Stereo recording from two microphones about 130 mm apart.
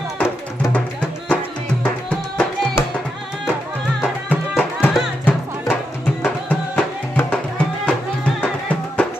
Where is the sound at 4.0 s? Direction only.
15° left (ahead or behind).